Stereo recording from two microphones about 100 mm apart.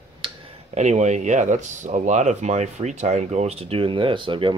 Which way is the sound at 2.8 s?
55° right (ahead or behind).